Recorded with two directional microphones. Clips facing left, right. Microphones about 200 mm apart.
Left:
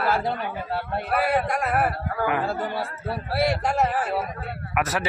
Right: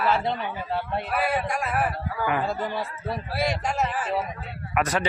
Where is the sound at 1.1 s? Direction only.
60° left (ahead or behind).